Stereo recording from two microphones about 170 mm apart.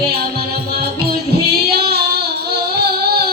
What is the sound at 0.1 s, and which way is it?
Music, 65° right (ahead or behind).